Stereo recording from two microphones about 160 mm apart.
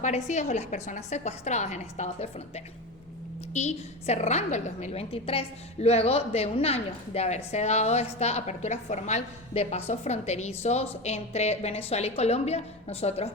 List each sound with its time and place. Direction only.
0.0 s a woman's voice: 45° left (ahead or behind)
3.5 s a woman's voice: 45° left (ahead or behind)